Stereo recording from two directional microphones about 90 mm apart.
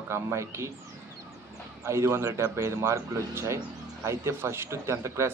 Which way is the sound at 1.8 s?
30° right (ahead or behind).